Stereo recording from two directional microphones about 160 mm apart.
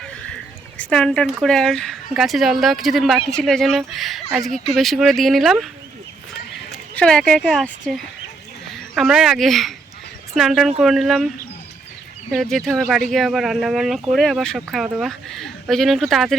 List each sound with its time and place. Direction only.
0.8 s speech: 5° left (ahead or behind)
6.7 s speech: 5° left (ahead or behind)
12.3 s speech: centre (ahead or behind)